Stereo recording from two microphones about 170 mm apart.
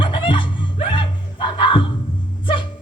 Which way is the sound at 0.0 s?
30° left (ahead or behind).